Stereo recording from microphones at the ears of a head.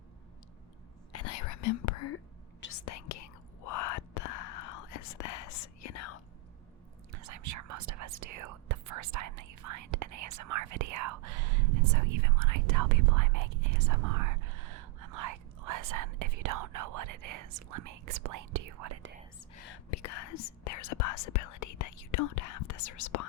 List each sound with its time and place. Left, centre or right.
1.1 s whispering: left
7.1 s whispering: right
19.5 s whispering: left